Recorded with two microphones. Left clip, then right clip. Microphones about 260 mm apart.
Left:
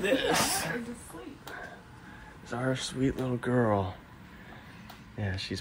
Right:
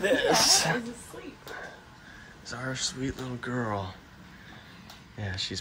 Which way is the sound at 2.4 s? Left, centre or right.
Centre.